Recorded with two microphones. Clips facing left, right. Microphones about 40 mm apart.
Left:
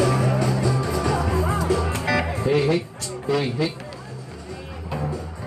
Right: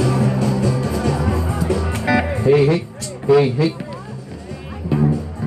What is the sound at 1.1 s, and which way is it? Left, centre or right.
Music, centre.